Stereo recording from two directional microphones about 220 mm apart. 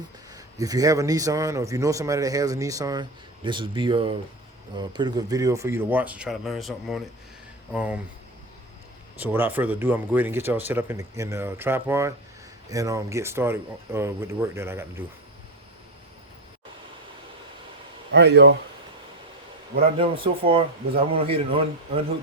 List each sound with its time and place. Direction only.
0.3 s a man's voice: 15° right (ahead or behind)
9.2 s a man's voice: 10° right (ahead or behind)
18.1 s a man's voice: 50° right (ahead or behind)
19.7 s a man's voice: 25° right (ahead or behind)